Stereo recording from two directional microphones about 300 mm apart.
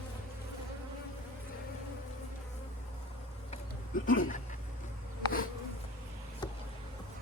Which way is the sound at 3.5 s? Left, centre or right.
Left.